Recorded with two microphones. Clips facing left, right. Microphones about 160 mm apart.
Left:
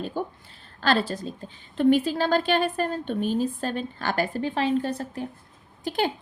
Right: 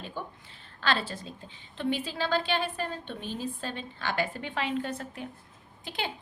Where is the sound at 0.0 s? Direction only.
40° left (ahead or behind).